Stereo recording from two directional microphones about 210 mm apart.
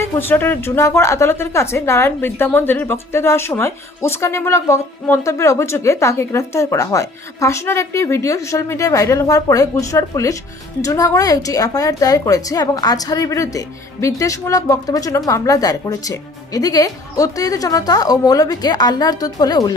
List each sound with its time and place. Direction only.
0.0 s a woman's voice: 10° left (ahead or behind)